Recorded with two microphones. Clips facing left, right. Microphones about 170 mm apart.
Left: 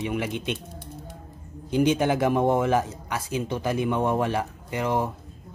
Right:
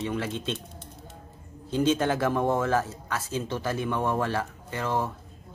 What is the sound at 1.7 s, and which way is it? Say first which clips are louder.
A man's voice: left 3 dB; 15° left (ahead or behind).